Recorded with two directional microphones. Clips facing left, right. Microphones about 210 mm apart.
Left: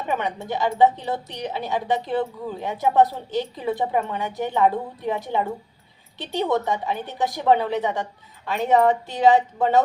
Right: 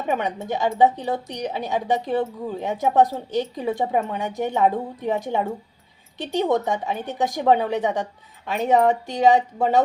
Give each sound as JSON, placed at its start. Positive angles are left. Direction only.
{"t": 0.1, "sound": "a woman's voice", "side_deg": -20}